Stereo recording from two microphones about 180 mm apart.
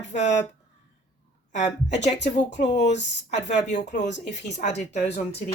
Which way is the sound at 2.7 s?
75° left (ahead or behind).